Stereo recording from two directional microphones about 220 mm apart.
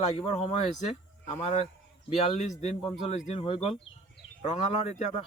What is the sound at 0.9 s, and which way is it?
Speech, 30° left (ahead or behind).